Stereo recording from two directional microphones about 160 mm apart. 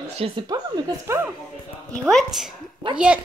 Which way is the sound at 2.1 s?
Centre (ahead or behind).